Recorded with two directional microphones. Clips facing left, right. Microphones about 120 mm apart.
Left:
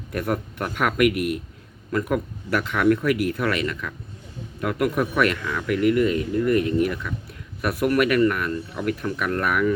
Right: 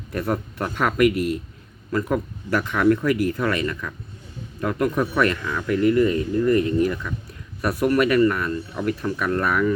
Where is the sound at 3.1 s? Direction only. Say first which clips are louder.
Right 1 dB; 75° left (ahead or behind).